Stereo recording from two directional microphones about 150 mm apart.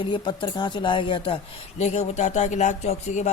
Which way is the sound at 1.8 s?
50° left (ahead or behind).